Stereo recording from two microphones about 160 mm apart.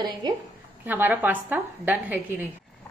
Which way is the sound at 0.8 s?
10° right (ahead or behind).